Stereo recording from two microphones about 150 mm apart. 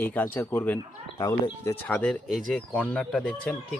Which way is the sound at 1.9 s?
10° left (ahead or behind).